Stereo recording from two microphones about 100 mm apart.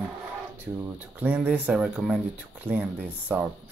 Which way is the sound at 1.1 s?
15° right (ahead or behind).